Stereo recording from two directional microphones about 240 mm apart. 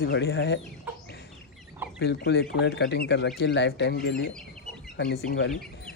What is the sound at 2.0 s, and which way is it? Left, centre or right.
Speech, left.